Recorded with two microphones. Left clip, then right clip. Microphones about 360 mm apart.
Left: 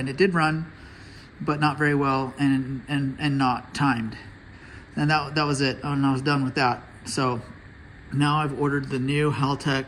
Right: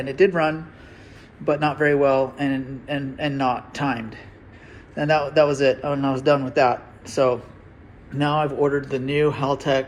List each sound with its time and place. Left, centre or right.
0.0 s a man's voice: centre